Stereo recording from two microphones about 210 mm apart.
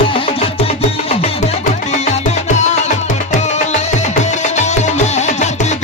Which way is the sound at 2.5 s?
35° left (ahead or behind).